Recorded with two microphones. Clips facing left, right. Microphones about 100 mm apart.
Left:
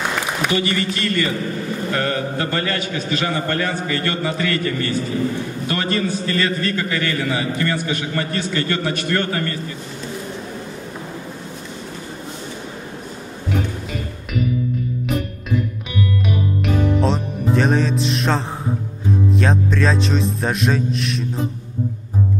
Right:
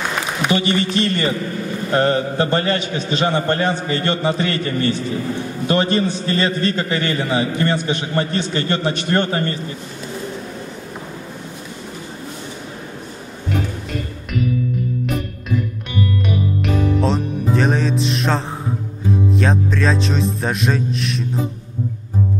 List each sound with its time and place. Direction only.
0.5 s a man's voice: 25° right (ahead or behind)
16.6 s music: centre (ahead or behind)